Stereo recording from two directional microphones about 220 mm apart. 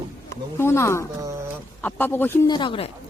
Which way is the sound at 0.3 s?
10° left (ahead or behind).